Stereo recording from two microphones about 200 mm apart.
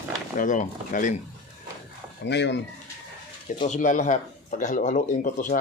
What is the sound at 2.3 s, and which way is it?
Speech, 60° left (ahead or behind).